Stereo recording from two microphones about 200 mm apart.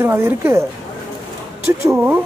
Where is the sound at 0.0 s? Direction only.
10° right (ahead or behind).